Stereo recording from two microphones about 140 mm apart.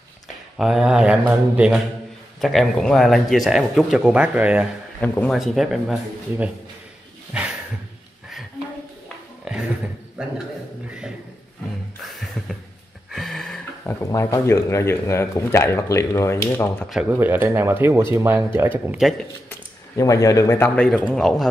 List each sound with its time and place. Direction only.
0.6 s speech: 5° right (ahead or behind)
2.4 s speech: centre (ahead or behind)
5.0 s speech: 10° left (ahead or behind)
5.3 s speech: centre (ahead or behind)
7.3 s a sound: 10° right (ahead or behind)
9.4 s a sound: 5° right (ahead or behind)
13.1 s a sound: centre (ahead or behind)
13.8 s speech: 15° left (ahead or behind)
17.1 s speech: 15° right (ahead or behind)
20.0 s speech: 25° left (ahead or behind); by 21.5 s 5° left (ahead or behind)